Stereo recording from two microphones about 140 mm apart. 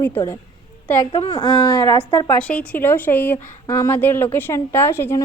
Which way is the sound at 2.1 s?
30° left (ahead or behind).